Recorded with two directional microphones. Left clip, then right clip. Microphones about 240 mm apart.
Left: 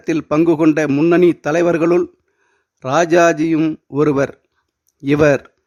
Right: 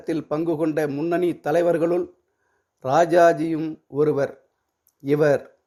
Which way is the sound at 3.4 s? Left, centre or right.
Left.